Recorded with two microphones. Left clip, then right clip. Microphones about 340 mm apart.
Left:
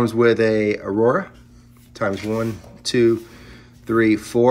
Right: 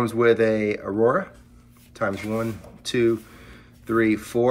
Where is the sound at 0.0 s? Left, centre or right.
Centre.